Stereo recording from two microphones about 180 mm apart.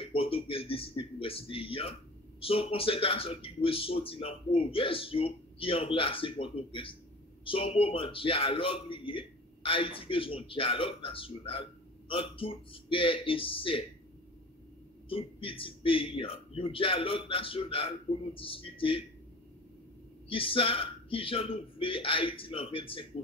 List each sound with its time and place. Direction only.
0.0 s a man's voice: 30° left (ahead or behind)
15.0 s speech: 30° left (ahead or behind)
20.2 s speech: 30° left (ahead or behind)